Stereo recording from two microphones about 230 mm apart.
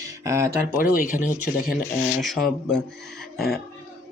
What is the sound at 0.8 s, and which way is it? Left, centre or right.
Speech, left.